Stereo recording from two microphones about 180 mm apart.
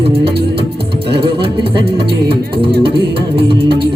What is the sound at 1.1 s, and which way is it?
Music, 30° right (ahead or behind).